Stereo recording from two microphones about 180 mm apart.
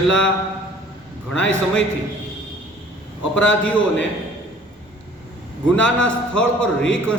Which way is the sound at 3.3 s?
5° left (ahead or behind).